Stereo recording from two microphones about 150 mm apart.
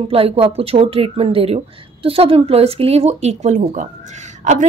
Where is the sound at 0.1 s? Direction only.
40° right (ahead or behind).